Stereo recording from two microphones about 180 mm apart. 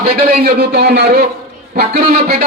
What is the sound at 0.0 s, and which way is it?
A man's voice, 60° right (ahead or behind).